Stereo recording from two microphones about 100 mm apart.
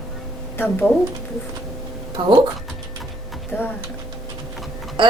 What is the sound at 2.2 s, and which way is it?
Speech, 55° right (ahead or behind).